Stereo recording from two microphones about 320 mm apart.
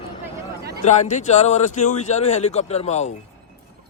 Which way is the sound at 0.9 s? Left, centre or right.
Left.